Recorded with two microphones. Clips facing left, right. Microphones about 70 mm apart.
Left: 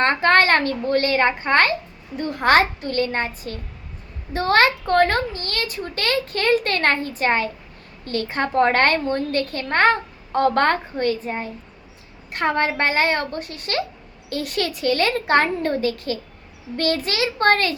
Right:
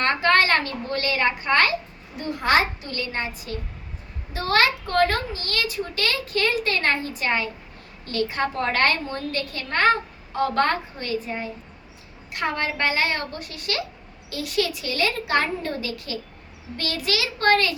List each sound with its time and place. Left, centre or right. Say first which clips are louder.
0.0 s a woman's voice: left 3 dB; left
2.1 s a woman's voice: left 4 dB; left